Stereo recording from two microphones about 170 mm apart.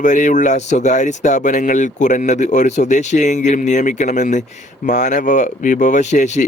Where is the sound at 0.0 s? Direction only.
45° left (ahead or behind).